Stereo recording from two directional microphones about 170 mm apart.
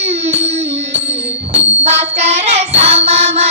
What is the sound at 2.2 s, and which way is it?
Child singing, 40° right (ahead or behind).